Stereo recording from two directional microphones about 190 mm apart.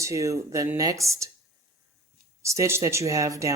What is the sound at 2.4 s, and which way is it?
Speech, 15° right (ahead or behind).